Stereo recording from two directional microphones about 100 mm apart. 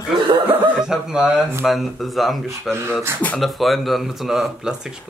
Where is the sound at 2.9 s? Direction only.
15° left (ahead or behind).